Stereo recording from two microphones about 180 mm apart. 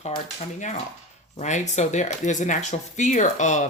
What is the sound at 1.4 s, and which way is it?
Speech, 40° left (ahead or behind).